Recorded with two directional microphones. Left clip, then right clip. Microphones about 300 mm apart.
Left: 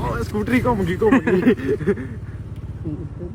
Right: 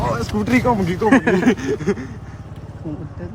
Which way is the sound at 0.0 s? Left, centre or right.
Right.